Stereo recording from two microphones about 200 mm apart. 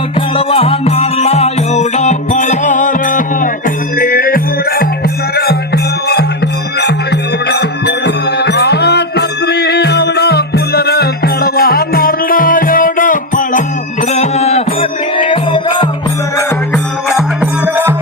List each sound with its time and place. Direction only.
0.3 s music: 30° left (ahead or behind); by 6.2 s 55° left (ahead or behind)
7.4 s music: 55° left (ahead or behind); by 15.9 s 25° left (ahead or behind)
17.1 s music: 5° right (ahead or behind)